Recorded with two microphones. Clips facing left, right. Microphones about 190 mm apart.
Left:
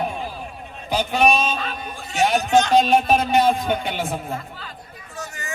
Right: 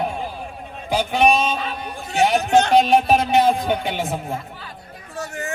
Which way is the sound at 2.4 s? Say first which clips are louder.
Even; 60° right (ahead or behind).